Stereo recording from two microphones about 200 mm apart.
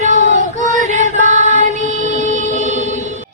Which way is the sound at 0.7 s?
40° right (ahead or behind).